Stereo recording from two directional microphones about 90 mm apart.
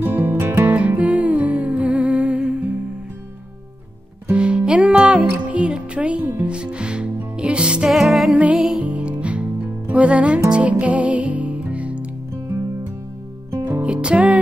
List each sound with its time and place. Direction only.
0.0 s music: 20° right (ahead or behind)
4.3 s music: 10° right (ahead or behind)
5.3 s speech: 15° right (ahead or behind)
7.3 s music: 10° right (ahead or behind)
8.8 s music: 15° right (ahead or behind)
13.7 s music: 10° right (ahead or behind)